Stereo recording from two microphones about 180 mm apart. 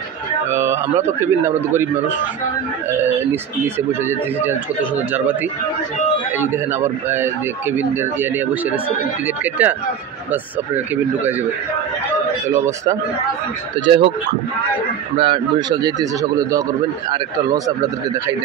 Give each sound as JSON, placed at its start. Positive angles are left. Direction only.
{"t": 0.5, "sound": "speech", "side_deg": -15}
{"t": 2.9, "sound": "speech", "side_deg": -10}
{"t": 12.4, "sound": "speech", "side_deg": -15}
{"t": 13.7, "sound": "speech", "side_deg": -30}
{"t": 15.1, "sound": "speech", "side_deg": -25}